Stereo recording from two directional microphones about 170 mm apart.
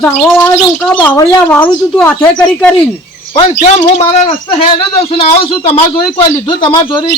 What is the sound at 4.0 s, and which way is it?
Speech, 35° left (ahead or behind).